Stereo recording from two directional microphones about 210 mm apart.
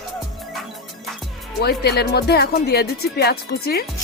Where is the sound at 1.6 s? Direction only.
50° left (ahead or behind).